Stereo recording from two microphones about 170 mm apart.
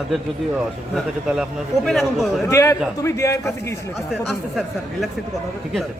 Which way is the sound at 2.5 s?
15° left (ahead or behind).